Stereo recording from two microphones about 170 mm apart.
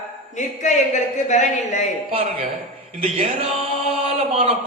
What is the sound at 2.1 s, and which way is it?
A man's voice, 35° right (ahead or behind).